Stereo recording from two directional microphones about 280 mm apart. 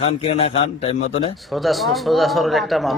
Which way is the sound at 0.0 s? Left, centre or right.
Centre.